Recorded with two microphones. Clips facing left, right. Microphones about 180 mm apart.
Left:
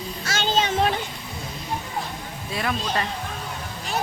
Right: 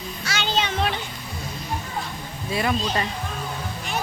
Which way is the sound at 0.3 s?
45° left (ahead or behind).